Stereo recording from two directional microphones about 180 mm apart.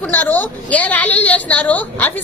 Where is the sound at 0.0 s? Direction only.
10° left (ahead or behind).